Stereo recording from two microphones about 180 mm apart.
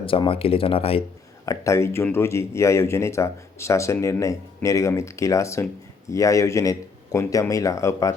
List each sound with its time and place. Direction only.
0.0 s speech: 30° left (ahead or behind)
1.5 s speech: 15° left (ahead or behind)